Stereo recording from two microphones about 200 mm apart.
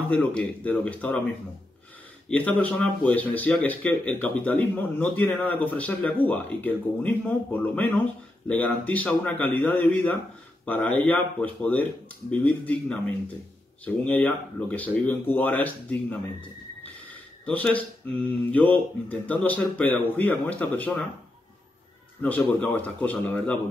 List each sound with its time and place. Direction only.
0.1 s speech: 5° left (ahead or behind)
2.2 s speech: 5° left (ahead or behind)
22.2 s speech: 10° left (ahead or behind)